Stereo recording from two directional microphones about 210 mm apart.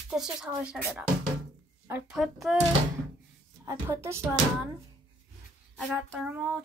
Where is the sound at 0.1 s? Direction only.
5° right (ahead or behind).